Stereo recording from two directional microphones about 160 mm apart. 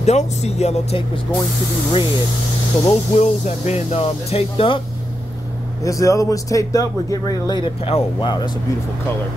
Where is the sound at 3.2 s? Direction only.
45° left (ahead or behind).